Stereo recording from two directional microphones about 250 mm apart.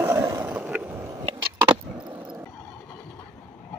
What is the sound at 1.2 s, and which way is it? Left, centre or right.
Skateboard, right.